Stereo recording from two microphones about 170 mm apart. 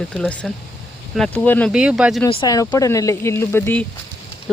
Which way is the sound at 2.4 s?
20° left (ahead or behind).